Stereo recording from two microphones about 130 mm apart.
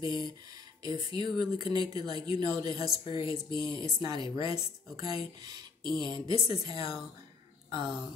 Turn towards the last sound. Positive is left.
turn(degrees=-35)  # may be behind; listen again after turning